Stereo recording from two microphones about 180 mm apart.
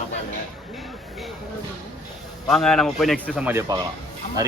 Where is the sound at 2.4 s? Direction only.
5° left (ahead or behind).